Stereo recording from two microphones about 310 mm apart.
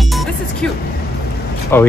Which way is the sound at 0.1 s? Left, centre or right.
Centre.